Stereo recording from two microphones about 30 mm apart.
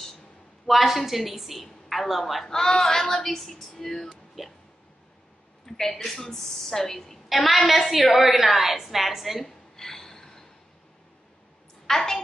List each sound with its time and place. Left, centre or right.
0.7 s a woman's voice: centre
2.4 s speech: centre
4.4 s a woman's voice: centre
5.7 s speech: centre
7.2 s a woman's voice: centre
9.8 s a sound: centre
11.9 s speech: centre